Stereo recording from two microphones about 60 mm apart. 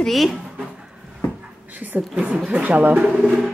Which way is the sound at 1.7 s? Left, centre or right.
Right.